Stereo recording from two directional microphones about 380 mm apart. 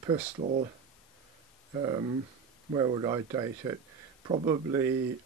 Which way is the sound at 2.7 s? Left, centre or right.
Centre.